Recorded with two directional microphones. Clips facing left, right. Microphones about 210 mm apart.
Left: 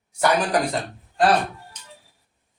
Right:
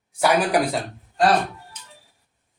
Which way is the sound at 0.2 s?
5° right (ahead or behind).